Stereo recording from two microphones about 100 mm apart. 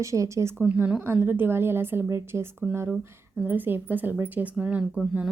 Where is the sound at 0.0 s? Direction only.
30° right (ahead or behind).